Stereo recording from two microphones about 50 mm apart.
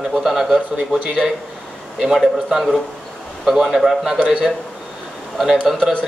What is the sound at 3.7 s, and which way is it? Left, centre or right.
Speech, centre.